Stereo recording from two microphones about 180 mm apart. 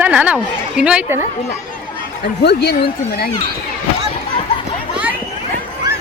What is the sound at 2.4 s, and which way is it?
Speech, 65° left (ahead or behind).